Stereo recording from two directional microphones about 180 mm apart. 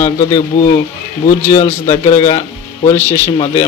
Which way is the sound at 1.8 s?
25° left (ahead or behind).